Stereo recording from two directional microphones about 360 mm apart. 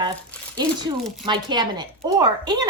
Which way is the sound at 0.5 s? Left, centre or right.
Centre.